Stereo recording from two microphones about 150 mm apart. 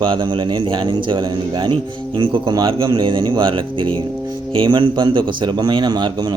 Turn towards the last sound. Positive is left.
turn(degrees=-30)  # may be behind; listen again after turning